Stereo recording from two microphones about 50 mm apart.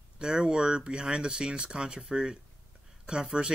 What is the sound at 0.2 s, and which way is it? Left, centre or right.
Speech, centre.